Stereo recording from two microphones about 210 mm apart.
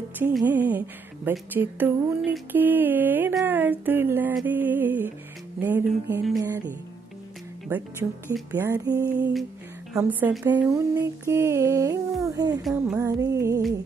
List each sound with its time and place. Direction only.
0.4 s speech: 10° right (ahead or behind)
12.6 s a sound: centre (ahead or behind)
13.0 s speech: 15° right (ahead or behind)